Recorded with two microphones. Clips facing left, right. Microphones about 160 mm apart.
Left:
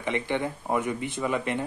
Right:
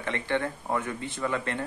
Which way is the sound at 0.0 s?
15° left (ahead or behind).